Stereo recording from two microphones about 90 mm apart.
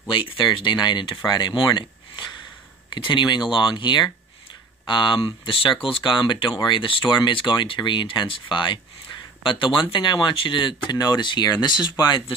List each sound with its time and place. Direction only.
0.1 s speech: 70° left (ahead or behind)
10.9 s speech: 50° left (ahead or behind)